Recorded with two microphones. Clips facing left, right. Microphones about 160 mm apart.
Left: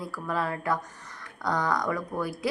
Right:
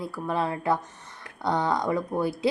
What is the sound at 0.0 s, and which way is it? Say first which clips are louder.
Speech: right 3 dB; 25° right (ahead or behind).